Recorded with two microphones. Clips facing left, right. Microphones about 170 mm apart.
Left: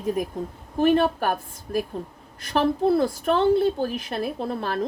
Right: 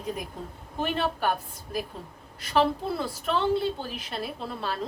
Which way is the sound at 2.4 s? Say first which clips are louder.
Left 4 dB; 45° left (ahead or behind).